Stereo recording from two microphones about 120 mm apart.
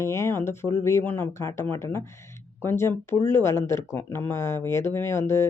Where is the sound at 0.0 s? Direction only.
25° left (ahead or behind).